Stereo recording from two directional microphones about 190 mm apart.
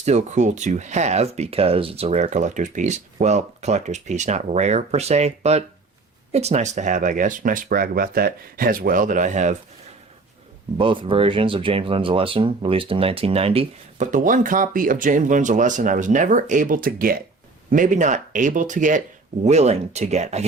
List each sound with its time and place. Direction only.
0.0 s speech: 35° right (ahead or behind)
10.8 s speech: 25° right (ahead or behind)